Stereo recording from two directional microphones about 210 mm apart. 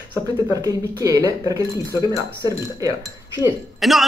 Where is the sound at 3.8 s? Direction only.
Centre (ahead or behind).